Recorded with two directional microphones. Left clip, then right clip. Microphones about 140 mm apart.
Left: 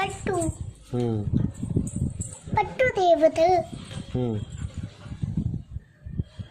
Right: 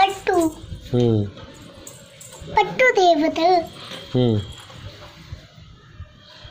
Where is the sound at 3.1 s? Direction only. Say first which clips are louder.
Right 2 dB; 60° left (ahead or behind).